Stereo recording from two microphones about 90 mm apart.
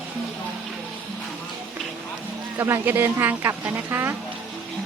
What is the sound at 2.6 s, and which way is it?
Speech, 30° right (ahead or behind).